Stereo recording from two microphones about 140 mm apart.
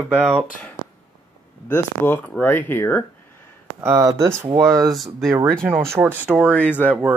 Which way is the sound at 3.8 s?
20° right (ahead or behind).